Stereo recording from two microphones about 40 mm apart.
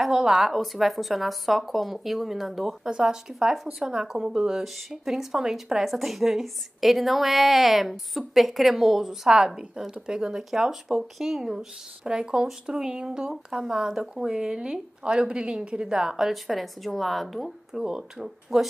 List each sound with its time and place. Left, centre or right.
0.1 s a woman's voice: centre
2.9 s speech: centre
5.9 s a woman's voice: centre
10.0 s speech: centre
10.5 s speech: centre
16.3 s a woman's voice: centre
17.7 s speech: centre